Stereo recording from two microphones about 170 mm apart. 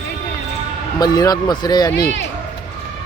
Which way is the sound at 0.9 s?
20° left (ahead or behind).